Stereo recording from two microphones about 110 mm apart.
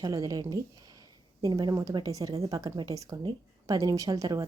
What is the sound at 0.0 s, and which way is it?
Speech, 35° right (ahead or behind).